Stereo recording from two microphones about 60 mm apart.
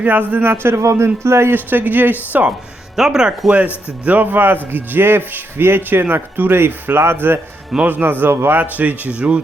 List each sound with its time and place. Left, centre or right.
0.0 s speech: right
0.4 s a man's voice: right
1.5 s a man's voice: right
2.9 s speech: centre
4.0 s a man's voice: right
8.8 s speech: right